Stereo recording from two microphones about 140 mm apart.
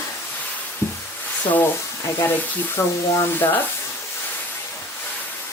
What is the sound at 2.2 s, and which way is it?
Speech, 15° left (ahead or behind).